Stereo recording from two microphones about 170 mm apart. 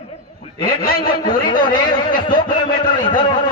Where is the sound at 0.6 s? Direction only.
55° left (ahead or behind).